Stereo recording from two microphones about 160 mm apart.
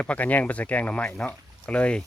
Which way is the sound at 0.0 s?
10° left (ahead or behind).